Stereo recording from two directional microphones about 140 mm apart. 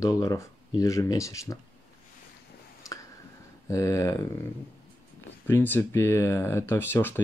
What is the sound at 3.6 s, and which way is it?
Speech, 20° left (ahead or behind).